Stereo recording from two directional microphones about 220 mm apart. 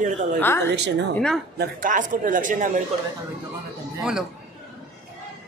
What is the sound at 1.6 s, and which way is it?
Speech, 40° right (ahead or behind).